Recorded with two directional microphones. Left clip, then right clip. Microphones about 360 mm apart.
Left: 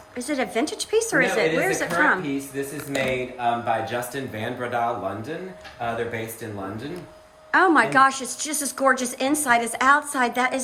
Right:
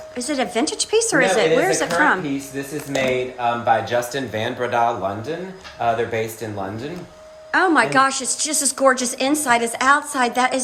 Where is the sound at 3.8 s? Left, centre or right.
Centre.